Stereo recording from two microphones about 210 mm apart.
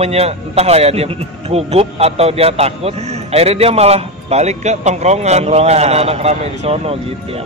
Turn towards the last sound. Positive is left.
turn(degrees=-30)  # may be behind; listen again after turning